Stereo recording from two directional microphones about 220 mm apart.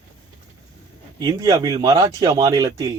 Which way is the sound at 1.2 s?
15° right (ahead or behind).